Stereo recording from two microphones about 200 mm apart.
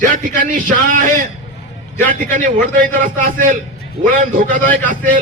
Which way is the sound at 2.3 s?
45° right (ahead or behind).